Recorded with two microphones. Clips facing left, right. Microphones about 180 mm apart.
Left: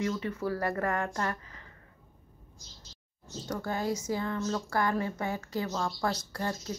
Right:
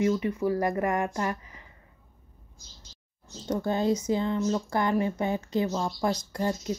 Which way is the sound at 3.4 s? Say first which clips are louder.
Right 6 dB; 25° right (ahead or behind).